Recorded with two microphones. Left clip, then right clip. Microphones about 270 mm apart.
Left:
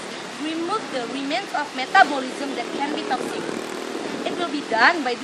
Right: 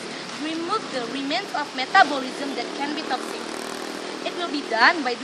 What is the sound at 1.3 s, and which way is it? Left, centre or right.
Speech, centre.